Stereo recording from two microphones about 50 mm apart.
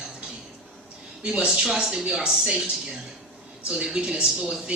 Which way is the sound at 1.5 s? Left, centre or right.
Centre.